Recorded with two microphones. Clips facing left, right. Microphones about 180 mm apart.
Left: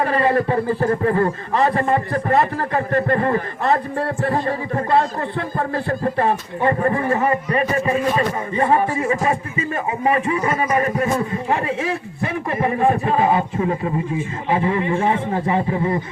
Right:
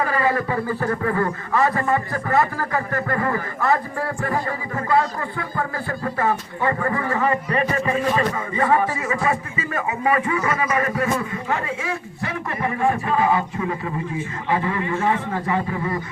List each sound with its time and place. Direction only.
0.1 s speech: 30° left (ahead or behind)